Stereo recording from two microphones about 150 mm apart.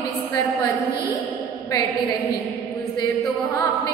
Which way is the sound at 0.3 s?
25° left (ahead or behind).